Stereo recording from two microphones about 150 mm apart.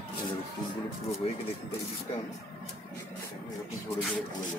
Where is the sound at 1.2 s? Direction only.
45° left (ahead or behind).